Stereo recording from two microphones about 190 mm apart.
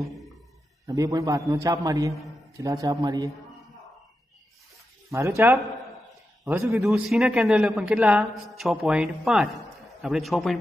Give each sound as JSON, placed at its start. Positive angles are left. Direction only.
{"t": 0.0, "sound": "a sound", "side_deg": 0}
{"t": 0.8, "sound": "a man's voice", "side_deg": -20}
{"t": 5.1, "sound": "a man's voice", "side_deg": -15}
{"t": 6.8, "sound": "a man's voice", "side_deg": 0}